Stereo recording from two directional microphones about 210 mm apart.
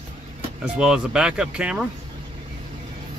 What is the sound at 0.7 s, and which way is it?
Speech, 5° right (ahead or behind).